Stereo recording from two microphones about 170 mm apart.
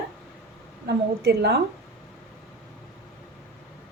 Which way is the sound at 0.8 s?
70° right (ahead or behind).